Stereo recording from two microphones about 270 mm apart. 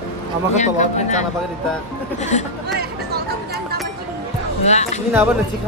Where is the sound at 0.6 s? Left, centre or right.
Left.